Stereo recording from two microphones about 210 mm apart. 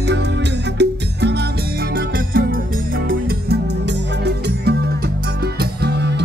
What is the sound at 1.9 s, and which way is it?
Music, 45° right (ahead or behind).